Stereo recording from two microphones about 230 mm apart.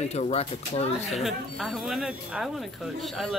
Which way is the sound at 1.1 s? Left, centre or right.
Centre.